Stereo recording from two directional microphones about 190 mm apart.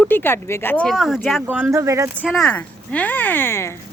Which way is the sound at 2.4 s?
10° left (ahead or behind).